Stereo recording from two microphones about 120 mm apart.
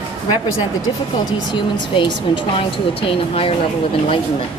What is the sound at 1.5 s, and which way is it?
Speech, 40° left (ahead or behind).